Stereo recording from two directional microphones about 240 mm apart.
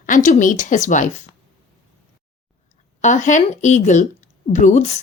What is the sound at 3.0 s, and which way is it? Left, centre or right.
Speech, left.